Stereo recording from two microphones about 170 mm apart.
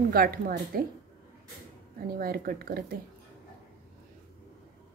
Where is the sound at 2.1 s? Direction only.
60° right (ahead or behind).